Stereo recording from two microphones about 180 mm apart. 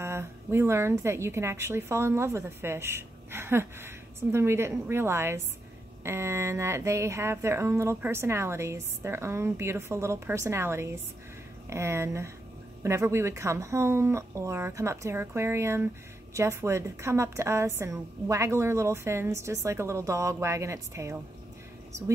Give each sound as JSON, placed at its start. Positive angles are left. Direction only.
{"t": 0.0, "sound": "speech", "side_deg": -15}